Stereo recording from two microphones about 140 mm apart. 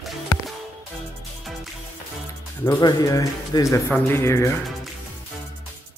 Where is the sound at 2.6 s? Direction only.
25° left (ahead or behind).